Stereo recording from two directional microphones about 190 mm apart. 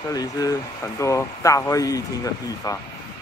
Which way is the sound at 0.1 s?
20° left (ahead or behind).